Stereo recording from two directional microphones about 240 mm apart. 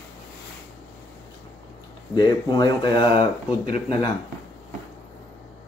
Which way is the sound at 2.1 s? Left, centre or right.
Centre.